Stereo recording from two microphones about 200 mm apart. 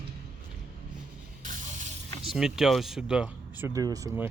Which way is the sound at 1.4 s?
40° right (ahead or behind).